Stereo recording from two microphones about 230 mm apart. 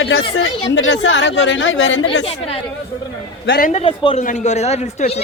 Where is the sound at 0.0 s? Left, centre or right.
Left.